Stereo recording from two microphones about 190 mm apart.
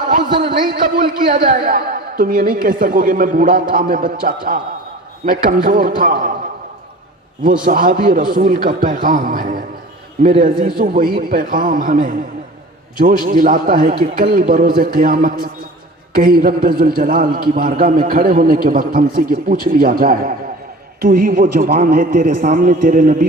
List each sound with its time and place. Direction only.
0.3 s a man's voice: 25° right (ahead or behind)
0.7 s a man's voice: 45° right (ahead or behind)
7.6 s a man's voice: 45° right (ahead or behind)